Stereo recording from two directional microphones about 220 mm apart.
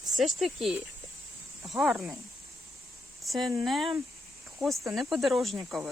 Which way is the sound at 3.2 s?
Centre (ahead or behind).